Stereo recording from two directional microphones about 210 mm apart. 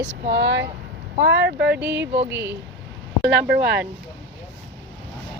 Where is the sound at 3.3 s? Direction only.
55° right (ahead or behind).